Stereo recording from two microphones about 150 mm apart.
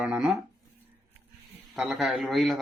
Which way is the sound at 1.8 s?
Centre (ahead or behind).